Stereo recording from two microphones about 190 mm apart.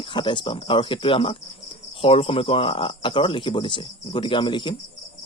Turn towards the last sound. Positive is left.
turn(degrees=25)  # may be behind; listen again after turning